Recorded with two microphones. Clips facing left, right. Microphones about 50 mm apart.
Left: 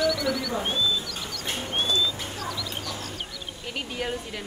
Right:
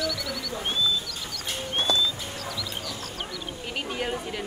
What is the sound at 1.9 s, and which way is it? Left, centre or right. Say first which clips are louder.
Bird: right 1 dB; right.